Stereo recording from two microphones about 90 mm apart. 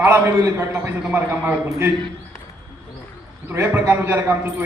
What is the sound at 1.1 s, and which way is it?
Speech, 20° right (ahead or behind).